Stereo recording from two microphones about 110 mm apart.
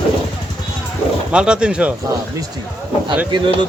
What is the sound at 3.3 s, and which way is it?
Speech, 45° right (ahead or behind).